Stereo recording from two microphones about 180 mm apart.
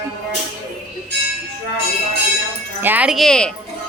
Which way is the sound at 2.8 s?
10° right (ahead or behind).